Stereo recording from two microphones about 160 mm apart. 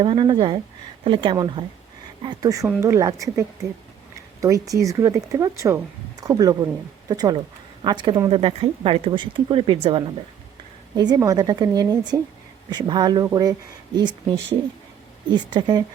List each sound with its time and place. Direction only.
0.0 s speech: 35° right (ahead or behind)
15.3 s speech: 30° right (ahead or behind)